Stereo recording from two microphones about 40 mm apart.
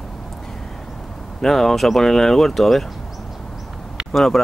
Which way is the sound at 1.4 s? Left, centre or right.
Centre.